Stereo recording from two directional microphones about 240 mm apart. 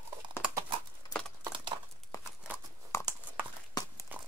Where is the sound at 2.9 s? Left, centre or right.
Centre.